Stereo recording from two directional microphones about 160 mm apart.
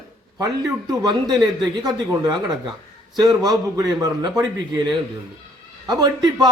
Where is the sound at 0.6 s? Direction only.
25° right (ahead or behind).